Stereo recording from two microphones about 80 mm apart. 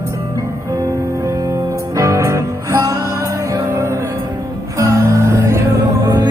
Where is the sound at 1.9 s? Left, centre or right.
Right.